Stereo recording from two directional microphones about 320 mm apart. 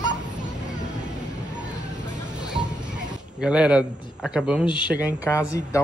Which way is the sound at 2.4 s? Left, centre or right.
Centre.